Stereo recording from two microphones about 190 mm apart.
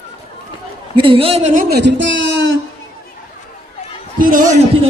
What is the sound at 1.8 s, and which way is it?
Speech, 75° right (ahead or behind).